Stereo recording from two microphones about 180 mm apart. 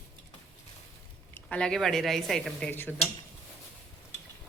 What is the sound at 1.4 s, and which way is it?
Speech, 5° left (ahead or behind).